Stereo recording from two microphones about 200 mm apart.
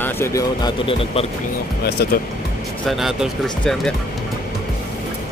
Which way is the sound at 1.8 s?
55° left (ahead or behind).